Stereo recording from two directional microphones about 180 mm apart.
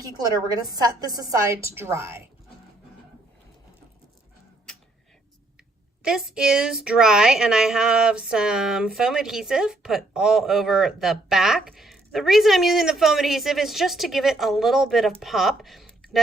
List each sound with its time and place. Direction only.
0.0 s a woman's voice: 20° right (ahead or behind)
6.0 s a woman's voice: 5° right (ahead or behind)